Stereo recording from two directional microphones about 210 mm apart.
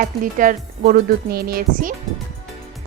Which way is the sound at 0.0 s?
40° right (ahead or behind).